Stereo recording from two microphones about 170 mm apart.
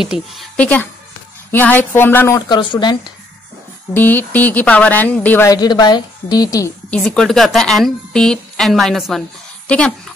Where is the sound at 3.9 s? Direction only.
10° left (ahead or behind).